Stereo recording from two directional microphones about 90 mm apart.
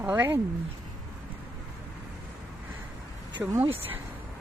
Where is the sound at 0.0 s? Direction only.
25° right (ahead or behind).